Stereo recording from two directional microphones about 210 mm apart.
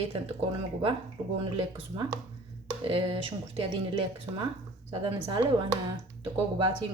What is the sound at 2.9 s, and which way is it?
A woman's voice, 25° right (ahead or behind).